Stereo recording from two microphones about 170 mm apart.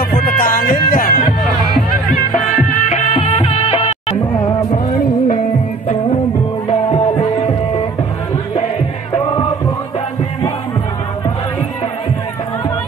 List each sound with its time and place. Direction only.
0.1 s music: 55° left (ahead or behind)
2.7 s music: 45° left (ahead or behind)
4.9 s music: 55° left (ahead or behind)
6.7 s music: 40° left (ahead or behind)
7.2 s music: 25° left (ahead or behind)
9.1 s music: 30° left (ahead or behind)